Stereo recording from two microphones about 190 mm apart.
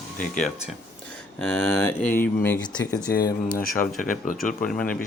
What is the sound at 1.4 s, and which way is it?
Speech, 5° left (ahead or behind).